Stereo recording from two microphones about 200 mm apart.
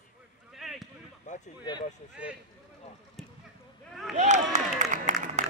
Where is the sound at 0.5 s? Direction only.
Centre (ahead or behind).